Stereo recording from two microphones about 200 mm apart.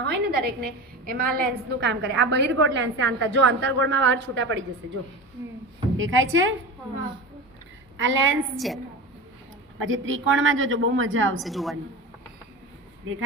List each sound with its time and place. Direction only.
0.0 s a woman's voice: 50° right (ahead or behind); by 6.5 s 75° right (ahead or behind)
7.9 s a woman's voice: 75° right (ahead or behind)
8.5 s a woman's voice: centre (ahead or behind)
9.7 s a woman's voice: 75° right (ahead or behind)
11.4 s a woman's voice: centre (ahead or behind)